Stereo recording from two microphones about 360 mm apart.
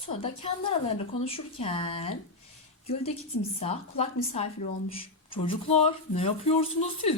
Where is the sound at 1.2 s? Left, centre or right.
Centre.